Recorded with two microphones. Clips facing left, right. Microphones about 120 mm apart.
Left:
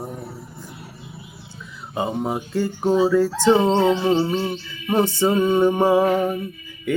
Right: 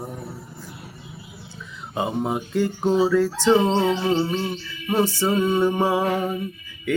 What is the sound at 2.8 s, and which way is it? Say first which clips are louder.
Music: left 2 dB; 10° left (ahead or behind).